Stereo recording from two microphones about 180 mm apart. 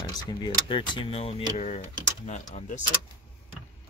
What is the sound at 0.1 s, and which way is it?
Speech, 25° left (ahead or behind).